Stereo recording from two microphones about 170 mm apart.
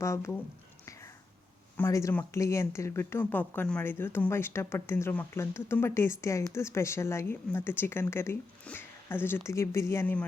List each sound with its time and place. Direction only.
0.0 s speech: 15° left (ahead or behind)
1.7 s speech: 15° left (ahead or behind)